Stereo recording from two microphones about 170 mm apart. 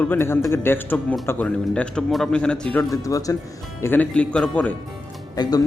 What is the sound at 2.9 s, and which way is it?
Speech, 20° left (ahead or behind).